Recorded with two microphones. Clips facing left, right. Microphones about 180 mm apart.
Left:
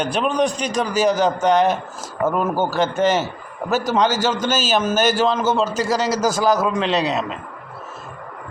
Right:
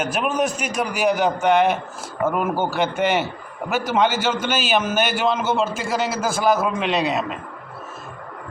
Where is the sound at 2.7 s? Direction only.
40° left (ahead or behind).